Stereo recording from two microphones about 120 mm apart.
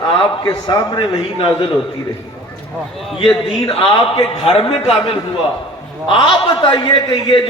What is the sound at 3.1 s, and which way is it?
A man's voice, 45° left (ahead or behind).